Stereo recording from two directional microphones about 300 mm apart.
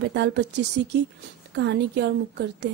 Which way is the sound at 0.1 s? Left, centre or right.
Right.